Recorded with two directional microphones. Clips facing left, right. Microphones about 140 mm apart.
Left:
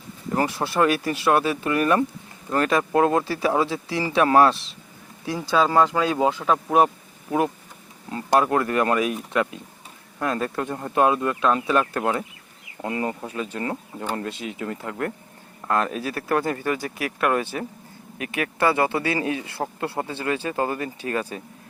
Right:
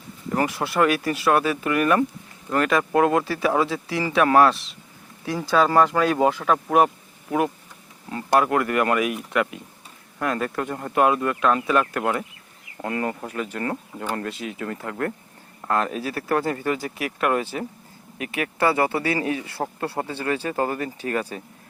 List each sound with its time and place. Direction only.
0.3 s speech: 30° left (ahead or behind)
5.5 s speech: 20° left (ahead or behind)
6.7 s a sound: 25° left (ahead or behind)
8.1 s speech: 25° left (ahead or behind)
15.6 s speech: 25° right (ahead or behind)
19.1 s speech: 25° left (ahead or behind)